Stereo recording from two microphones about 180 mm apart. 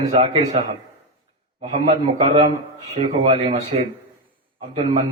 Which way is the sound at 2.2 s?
30° right (ahead or behind).